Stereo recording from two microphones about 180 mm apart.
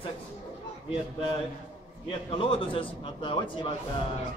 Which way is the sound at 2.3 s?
30° left (ahead or behind).